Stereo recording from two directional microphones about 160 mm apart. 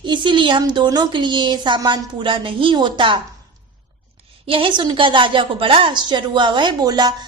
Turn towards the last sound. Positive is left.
turn(degrees=-25)  # may be behind; listen again after turning